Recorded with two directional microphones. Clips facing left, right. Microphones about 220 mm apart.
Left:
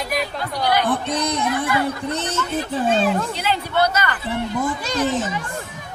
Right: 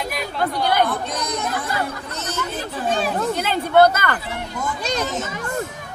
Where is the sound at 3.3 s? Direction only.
50° right (ahead or behind).